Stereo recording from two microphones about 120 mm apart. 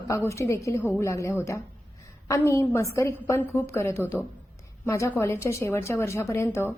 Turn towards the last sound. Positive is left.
turn(degrees=20)  # may be behind; listen again after turning